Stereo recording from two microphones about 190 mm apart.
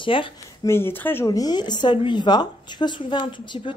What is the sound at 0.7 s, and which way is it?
Speech, 10° left (ahead or behind).